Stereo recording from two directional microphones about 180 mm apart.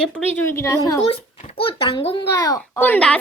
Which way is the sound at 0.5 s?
15° left (ahead or behind).